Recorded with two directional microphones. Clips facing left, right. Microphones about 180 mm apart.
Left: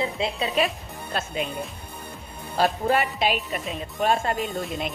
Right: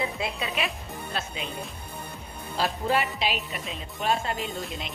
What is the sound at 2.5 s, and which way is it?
Speech, 50° left (ahead or behind).